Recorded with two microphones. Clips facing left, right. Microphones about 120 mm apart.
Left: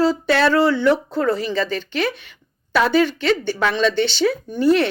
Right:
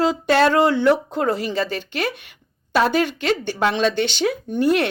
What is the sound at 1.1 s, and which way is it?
Speech, 45° right (ahead or behind).